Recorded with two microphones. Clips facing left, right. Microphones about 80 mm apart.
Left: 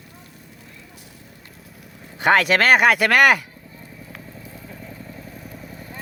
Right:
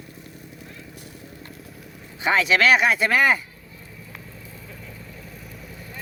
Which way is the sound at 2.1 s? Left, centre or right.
Left.